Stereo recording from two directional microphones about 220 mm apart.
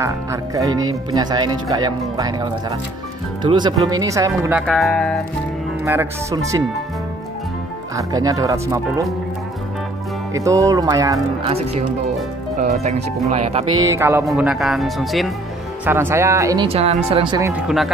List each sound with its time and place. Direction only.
0.0 s speech: 15° right (ahead or behind); by 5.2 s centre (ahead or behind)
5.9 s speech: 15° right (ahead or behind)
7.9 s speech: 15° right (ahead or behind)
10.3 s speech: 15° right (ahead or behind)
11.5 s speech: 30° right (ahead or behind)
13.8 s speech: 10° right (ahead or behind)
14.2 s speech: centre (ahead or behind)
16.6 s speech: 25° right (ahead or behind)
17.5 s speech: centre (ahead or behind)